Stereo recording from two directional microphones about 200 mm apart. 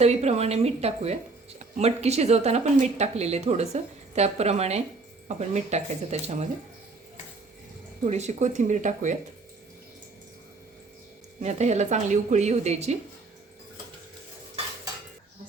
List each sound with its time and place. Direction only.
0.0 s speech: 35° right (ahead or behind)
8.0 s speech: 35° right (ahead or behind)
11.4 s speech: 35° right (ahead or behind)